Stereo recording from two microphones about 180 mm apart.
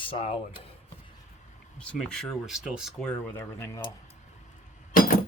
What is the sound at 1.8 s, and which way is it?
Speech, 5° left (ahead or behind).